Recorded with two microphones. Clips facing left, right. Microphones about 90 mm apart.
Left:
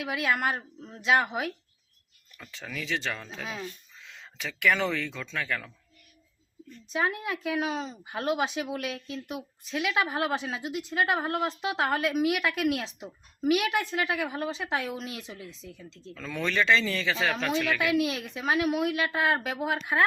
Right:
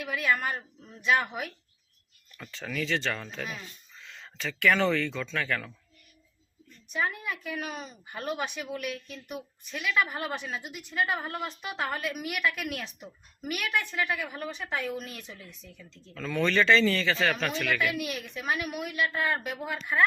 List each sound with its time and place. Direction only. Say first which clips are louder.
0.0 s a woman's voice: left 1 dB; 90° left
0.5 s speech: left 2 dB; 30° left (ahead or behind)
1.0 s a woman's voice: left 2 dB; 90° left
2.5 s speech: right 3 dB; 10° left (ahead or behind)
6.9 s a woman's voice: left 2 dB; 90° left
16.1 s speech: right 3 dB; 5° left (ahead or behind)
17.9 s a woman's voice: left 7 dB; 90° left